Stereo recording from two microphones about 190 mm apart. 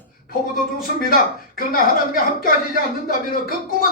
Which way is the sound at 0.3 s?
50° left (ahead or behind).